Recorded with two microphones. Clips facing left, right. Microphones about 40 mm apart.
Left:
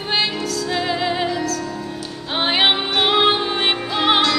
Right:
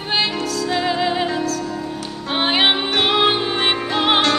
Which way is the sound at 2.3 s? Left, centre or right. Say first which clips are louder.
Even; centre.